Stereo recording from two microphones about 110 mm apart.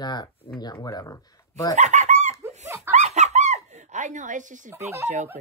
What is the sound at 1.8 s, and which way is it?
Chicken, 90° right.